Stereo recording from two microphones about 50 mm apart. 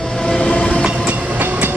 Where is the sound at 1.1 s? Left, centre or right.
Right.